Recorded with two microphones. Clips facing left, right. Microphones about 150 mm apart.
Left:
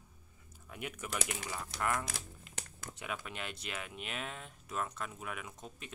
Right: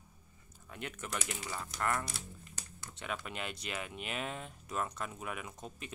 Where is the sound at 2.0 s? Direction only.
90° left.